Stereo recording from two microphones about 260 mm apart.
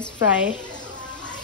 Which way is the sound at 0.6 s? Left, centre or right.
Centre.